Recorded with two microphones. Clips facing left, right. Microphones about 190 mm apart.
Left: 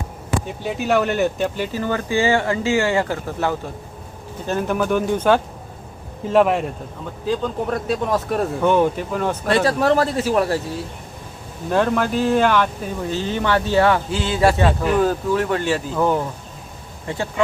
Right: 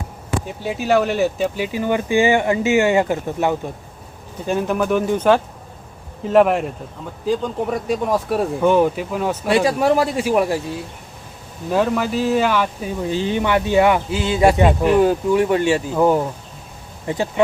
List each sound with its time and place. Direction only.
0.6 s speech: centre (ahead or behind); by 3.5 s 20° right (ahead or behind)
4.7 s speech: 5° right (ahead or behind)
11.7 s speech: 5° right (ahead or behind)